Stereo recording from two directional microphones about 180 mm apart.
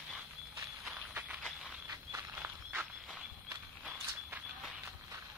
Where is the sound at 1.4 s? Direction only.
5° right (ahead or behind).